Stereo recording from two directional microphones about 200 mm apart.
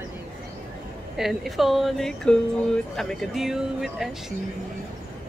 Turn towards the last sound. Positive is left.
turn(degrees=0)  # may be behind; listen again after turning